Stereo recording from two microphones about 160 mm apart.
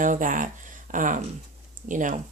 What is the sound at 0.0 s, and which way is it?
Speech, 55° right (ahead or behind).